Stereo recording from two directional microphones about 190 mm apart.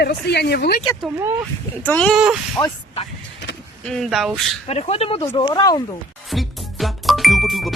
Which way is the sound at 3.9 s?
Centre (ahead or behind).